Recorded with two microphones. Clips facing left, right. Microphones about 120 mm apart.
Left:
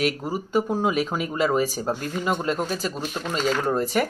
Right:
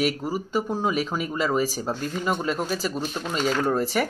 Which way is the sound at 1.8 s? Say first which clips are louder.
Left 1 dB; 5° left (ahead or behind).